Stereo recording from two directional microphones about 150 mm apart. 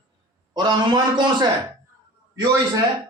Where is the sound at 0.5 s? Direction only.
30° right (ahead or behind).